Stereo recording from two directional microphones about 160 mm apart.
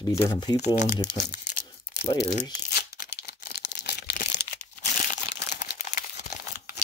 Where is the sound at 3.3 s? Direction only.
90° left.